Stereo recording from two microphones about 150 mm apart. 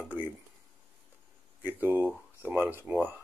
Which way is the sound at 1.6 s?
10° right (ahead or behind).